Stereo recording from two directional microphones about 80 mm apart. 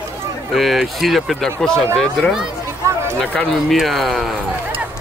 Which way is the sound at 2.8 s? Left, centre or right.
Right.